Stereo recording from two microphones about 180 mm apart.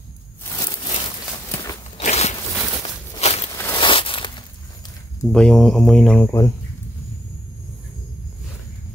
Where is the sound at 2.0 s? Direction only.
40° left (ahead or behind).